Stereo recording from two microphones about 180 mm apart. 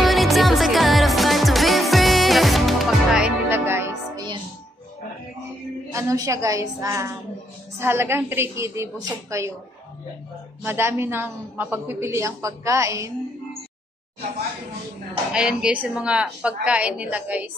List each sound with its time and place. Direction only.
0.0 s music: centre (ahead or behind)
5.9 s a man's voice: 15° right (ahead or behind)
10.6 s a man's voice: 15° right (ahead or behind)
15.3 s a man's voice: 5° right (ahead or behind)